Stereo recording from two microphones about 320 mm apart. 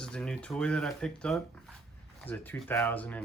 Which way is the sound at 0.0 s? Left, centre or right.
Centre.